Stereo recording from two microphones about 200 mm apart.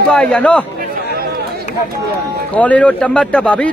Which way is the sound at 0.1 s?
5° left (ahead or behind).